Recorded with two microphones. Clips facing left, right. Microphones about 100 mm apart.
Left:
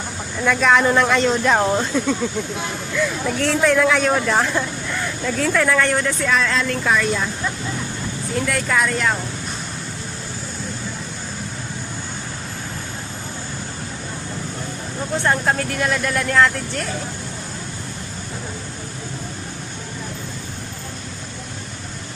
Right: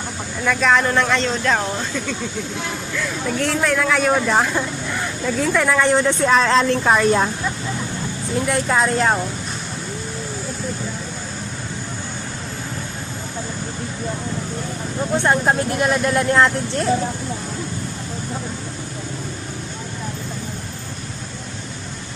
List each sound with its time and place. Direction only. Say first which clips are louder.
0.4 s speech: left 1 dB; centre (ahead or behind); by 2.1 s 20° left (ahead or behind)
2.9 s speech: left 3 dB; centre (ahead or behind); by 6.1 s 20° right (ahead or behind)
6.2 s speech: right 6 dB; 35° right (ahead or behind)
8.4 s speech: right 2 dB; 25° right (ahead or behind)
15.1 s speech: right 2 dB; 20° right (ahead or behind)